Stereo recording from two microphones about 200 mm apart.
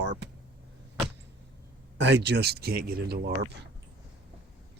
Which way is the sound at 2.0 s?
60° right (ahead or behind).